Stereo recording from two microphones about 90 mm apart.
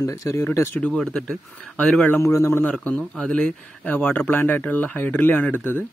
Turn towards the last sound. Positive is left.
turn(degrees=20)  # may be behind; listen again after turning